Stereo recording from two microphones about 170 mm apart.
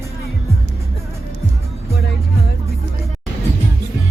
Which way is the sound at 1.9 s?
70° left (ahead or behind).